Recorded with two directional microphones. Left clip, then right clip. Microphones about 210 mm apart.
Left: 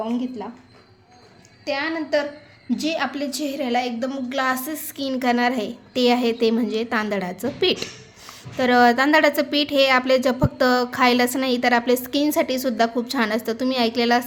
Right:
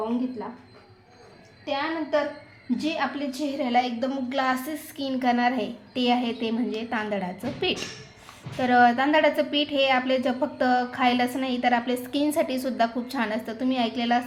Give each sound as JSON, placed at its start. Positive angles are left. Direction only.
{"t": 1.6, "sound": "a woman's voice", "side_deg": 40}
{"t": 2.6, "sound": "a woman's voice", "side_deg": 50}